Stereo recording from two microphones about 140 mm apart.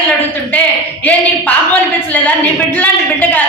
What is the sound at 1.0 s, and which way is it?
Speech, 10° left (ahead or behind).